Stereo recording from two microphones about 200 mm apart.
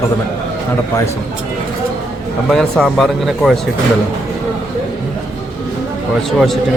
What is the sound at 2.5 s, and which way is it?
Speech, centre (ahead or behind).